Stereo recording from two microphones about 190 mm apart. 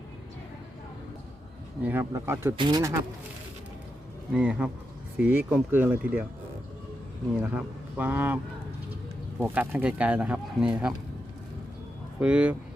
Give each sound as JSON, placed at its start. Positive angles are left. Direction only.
{"t": 1.8, "sound": "speech", "side_deg": -10}
{"t": 4.3, "sound": "speech", "side_deg": -5}
{"t": 7.4, "sound": "speech", "side_deg": -5}
{"t": 9.4, "sound": "speech", "side_deg": -10}
{"t": 12.2, "sound": "speech", "side_deg": -5}